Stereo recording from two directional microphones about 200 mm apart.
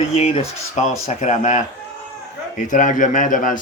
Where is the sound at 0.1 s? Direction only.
35° left (ahead or behind).